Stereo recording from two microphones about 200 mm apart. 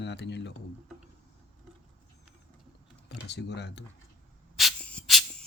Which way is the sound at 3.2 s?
60° left (ahead or behind).